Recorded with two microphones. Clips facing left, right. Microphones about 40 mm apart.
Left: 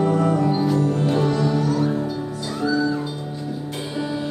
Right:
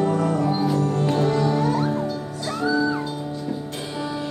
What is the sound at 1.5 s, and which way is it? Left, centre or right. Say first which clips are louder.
Music: left 1 dB; right.